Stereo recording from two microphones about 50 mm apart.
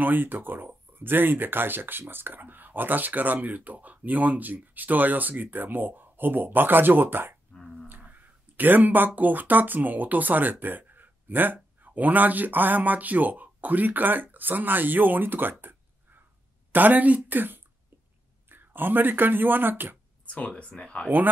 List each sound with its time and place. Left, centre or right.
0.0 s speech: right
7.5 s dog: centre
8.0 s speech: right
15.6 s a sound: right
16.7 s speech: right
20.2 s speech: left